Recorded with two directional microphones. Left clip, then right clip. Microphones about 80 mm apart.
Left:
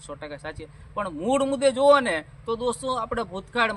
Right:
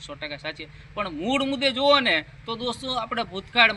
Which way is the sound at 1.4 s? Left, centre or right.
Left.